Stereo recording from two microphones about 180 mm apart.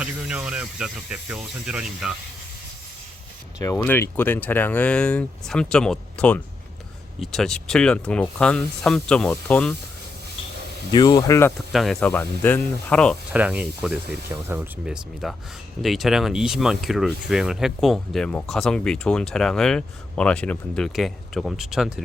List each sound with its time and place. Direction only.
0.0 s speech: 5° right (ahead or behind)
3.6 s speech: 15° left (ahead or behind)
10.9 s speech: 25° left (ahead or behind)
11.7 s speech: centre (ahead or behind)
13.3 s speech: 10° right (ahead or behind)